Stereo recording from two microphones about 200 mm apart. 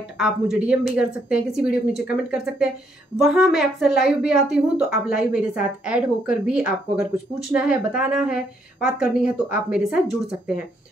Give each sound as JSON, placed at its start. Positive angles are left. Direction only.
{"t": 0.2, "sound": "a woman's voice", "side_deg": -5}